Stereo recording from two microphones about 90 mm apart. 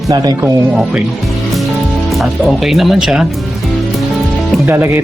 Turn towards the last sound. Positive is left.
turn(degrees=-20)  # may be behind; listen again after turning